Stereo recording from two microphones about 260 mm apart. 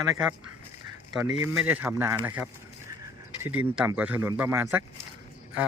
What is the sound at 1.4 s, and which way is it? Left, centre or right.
Speech, centre.